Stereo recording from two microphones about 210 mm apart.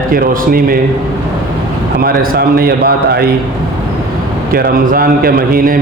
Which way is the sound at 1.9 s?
45° right (ahead or behind).